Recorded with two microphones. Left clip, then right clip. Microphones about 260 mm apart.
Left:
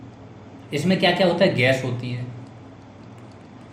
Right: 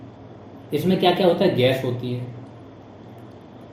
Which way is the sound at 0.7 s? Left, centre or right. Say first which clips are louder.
Right 1 dB; left.